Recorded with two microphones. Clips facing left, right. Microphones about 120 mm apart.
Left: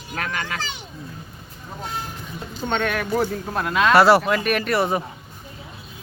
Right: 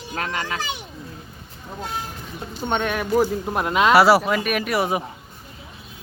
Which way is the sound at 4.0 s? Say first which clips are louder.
Left 3 dB; 5° right (ahead or behind).